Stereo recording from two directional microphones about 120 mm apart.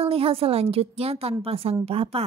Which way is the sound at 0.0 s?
55° right (ahead or behind).